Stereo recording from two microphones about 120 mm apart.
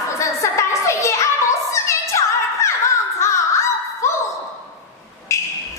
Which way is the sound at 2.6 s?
25° left (ahead or behind).